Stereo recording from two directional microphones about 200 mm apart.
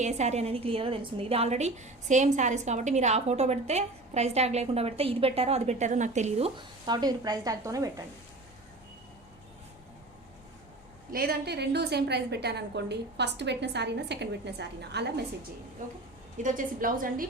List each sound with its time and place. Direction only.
0.0 s a woman's voice: 35° right (ahead or behind); by 8.0 s 15° right (ahead or behind)
11.1 s a woman's voice: 50° right (ahead or behind)
16.4 s a woman's voice: 40° right (ahead or behind)